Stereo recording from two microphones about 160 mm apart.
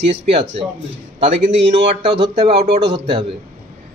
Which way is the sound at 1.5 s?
90° right.